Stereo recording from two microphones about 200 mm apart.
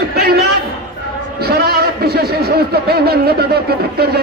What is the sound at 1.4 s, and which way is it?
A man's voice, 50° right (ahead or behind).